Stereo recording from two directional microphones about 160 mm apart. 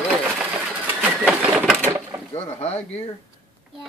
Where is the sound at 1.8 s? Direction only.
15° right (ahead or behind).